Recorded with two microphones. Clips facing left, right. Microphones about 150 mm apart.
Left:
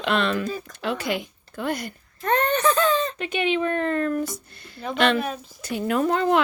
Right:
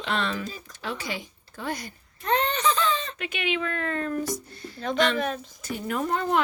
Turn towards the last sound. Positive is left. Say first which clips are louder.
# left 5 dB
turn(degrees=90)